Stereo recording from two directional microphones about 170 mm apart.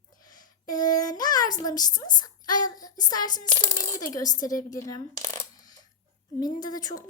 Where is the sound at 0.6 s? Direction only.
25° left (ahead or behind).